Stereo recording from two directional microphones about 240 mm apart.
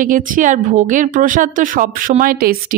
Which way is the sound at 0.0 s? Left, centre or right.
Right.